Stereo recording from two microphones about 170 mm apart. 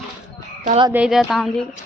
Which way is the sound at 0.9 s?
5° right (ahead or behind).